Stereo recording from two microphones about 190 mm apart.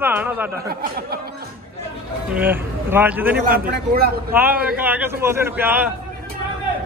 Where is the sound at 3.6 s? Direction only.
50° right (ahead or behind).